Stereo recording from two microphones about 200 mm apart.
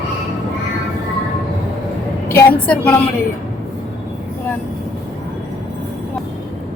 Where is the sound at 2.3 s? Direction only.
10° left (ahead or behind).